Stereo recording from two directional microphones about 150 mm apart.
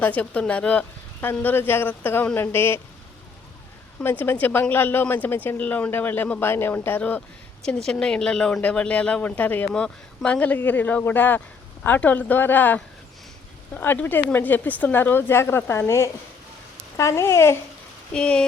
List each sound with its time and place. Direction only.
0.0 s a woman's voice: 10° left (ahead or behind)
4.0 s a woman's voice: 15° left (ahead or behind)
18.1 s speech: 5° left (ahead or behind)